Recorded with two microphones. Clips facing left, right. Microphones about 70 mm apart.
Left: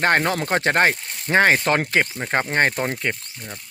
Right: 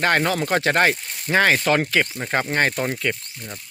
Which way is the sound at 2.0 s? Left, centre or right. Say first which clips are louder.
Left 1 dB; centre.